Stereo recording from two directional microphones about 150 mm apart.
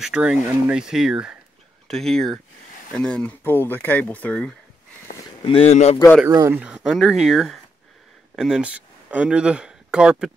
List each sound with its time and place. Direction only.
0.0 s speech: 5° right (ahead or behind)
5.4 s speech: 40° left (ahead or behind)
6.2 s speech: 20° right (ahead or behind)
6.6 s speech: 5° right (ahead or behind)